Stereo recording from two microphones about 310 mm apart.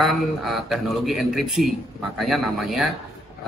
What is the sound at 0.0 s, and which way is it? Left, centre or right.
Speech, centre.